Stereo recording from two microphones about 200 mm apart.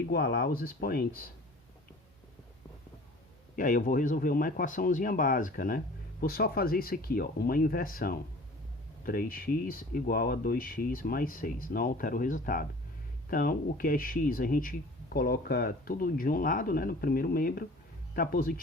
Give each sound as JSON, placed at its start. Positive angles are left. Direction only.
{"t": 0.0, "sound": "speech", "side_deg": 50}
{"t": 3.5, "sound": "speech", "side_deg": 40}